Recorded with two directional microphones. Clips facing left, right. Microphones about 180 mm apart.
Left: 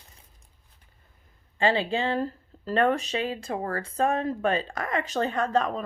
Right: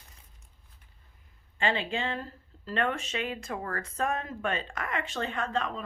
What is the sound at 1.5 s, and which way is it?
Speech, 35° left (ahead or behind).